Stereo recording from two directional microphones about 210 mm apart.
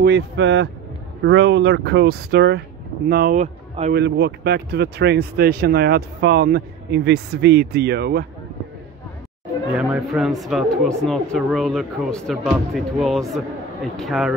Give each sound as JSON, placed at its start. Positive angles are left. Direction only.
{"t": 0.0, "sound": "speech", "side_deg": -55}
{"t": 9.8, "sound": "speech", "side_deg": 0}